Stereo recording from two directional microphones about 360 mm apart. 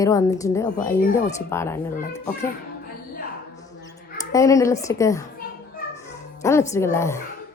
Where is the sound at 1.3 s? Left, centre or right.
Centre.